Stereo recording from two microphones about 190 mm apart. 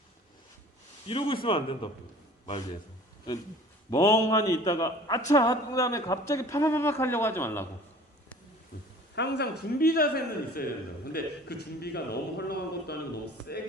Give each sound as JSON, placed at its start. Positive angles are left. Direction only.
{"t": 1.0, "sound": "speech", "side_deg": 30}
{"t": 3.8, "sound": "a man's voice", "side_deg": 20}
{"t": 8.7, "sound": "a sound", "side_deg": 45}
{"t": 9.1, "sound": "a man's voice", "side_deg": 65}